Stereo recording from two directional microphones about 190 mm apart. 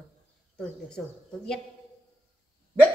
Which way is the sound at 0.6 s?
5° left (ahead or behind).